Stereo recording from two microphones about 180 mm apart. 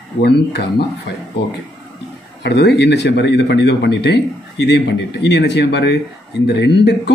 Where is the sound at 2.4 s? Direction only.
65° left (ahead or behind).